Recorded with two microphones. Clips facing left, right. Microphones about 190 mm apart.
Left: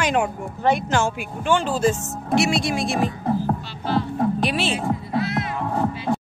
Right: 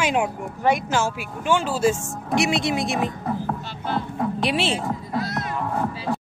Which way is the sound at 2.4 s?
20° right (ahead or behind).